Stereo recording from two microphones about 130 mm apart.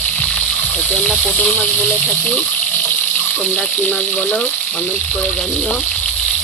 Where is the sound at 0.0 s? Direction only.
10° left (ahead or behind).